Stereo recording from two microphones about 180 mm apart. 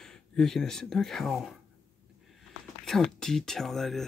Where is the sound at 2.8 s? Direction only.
5° left (ahead or behind).